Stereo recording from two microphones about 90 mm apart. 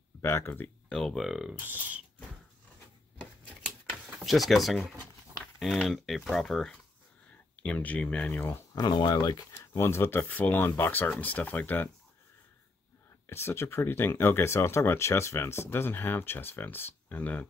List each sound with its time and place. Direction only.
0.2 s speech: 25° left (ahead or behind)
0.8 s speech: 5° left (ahead or behind)
3.2 s a sound: 20° left (ahead or behind)
4.2 s speech: centre (ahead or behind)
7.6 s speech: 15° left (ahead or behind)
8.9 s speech: 55° left (ahead or behind)
9.8 s speech: 30° left (ahead or behind)
13.3 s speech: 30° left (ahead or behind)